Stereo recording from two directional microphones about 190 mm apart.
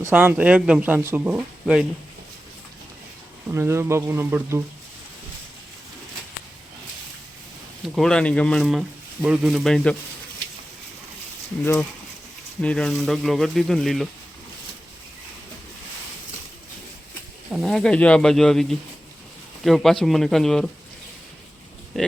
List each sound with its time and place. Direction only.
0.0 s speech: 10° right (ahead or behind)
3.5 s speech: 15° right (ahead or behind)
7.9 s speech: 5° left (ahead or behind)
11.6 s speech: 10° left (ahead or behind)
17.5 s speech: centre (ahead or behind)
22.0 s speech: centre (ahead or behind)